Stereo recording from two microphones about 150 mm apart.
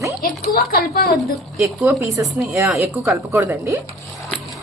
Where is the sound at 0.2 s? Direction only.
85° left.